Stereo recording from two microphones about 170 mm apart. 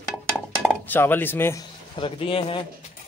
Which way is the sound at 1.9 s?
30° left (ahead or behind).